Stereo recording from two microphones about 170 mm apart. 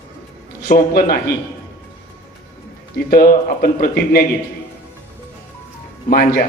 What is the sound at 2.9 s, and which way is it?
Speech, 65° left (ahead or behind).